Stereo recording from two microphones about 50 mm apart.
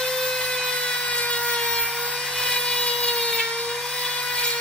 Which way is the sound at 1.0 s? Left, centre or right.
Left.